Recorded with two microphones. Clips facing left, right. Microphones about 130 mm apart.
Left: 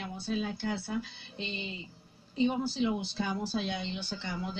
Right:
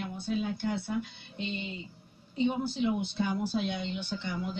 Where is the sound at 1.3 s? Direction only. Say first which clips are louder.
Right 3 dB; 30° left (ahead or behind).